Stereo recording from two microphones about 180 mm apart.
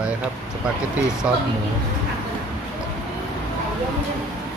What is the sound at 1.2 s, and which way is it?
Speech, 10° right (ahead or behind).